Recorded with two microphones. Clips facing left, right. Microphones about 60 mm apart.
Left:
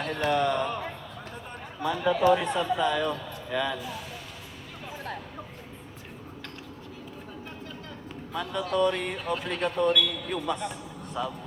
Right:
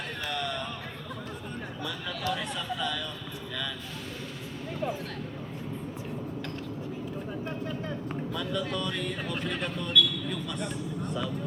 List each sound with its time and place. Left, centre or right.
0.0 s a sound: left
0.3 s speech: left
1.8 s speech: left
8.3 s speech: left
9.6 s speech: centre